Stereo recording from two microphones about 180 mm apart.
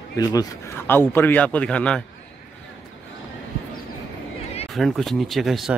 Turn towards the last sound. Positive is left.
turn(degrees=0)  # may be behind; listen again after turning